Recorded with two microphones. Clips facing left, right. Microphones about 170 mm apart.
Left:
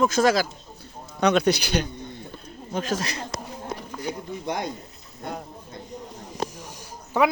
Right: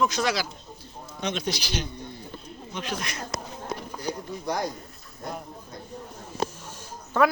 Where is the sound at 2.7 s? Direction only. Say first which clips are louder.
Left 6 dB; 40° left (ahead or behind).